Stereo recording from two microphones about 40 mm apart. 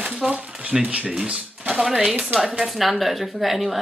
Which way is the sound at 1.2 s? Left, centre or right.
Right.